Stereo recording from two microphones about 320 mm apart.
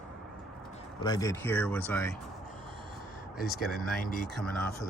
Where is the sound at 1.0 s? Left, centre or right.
Centre.